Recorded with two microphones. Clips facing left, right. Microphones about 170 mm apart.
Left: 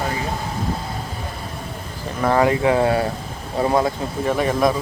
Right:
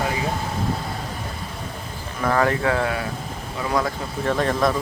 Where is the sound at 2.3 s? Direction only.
20° left (ahead or behind).